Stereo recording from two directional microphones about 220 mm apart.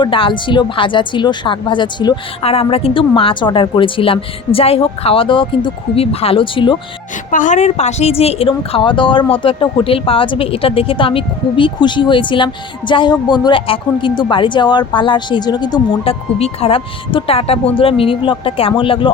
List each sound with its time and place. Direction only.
0.0 s a woman's voice: 25° left (ahead or behind)
7.3 s a woman's voice: 35° left (ahead or behind)